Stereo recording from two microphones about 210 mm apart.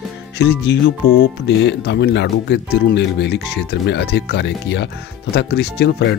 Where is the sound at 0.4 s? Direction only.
55° left (ahead or behind).